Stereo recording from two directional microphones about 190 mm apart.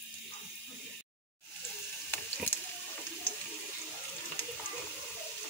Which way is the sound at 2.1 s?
10° left (ahead or behind).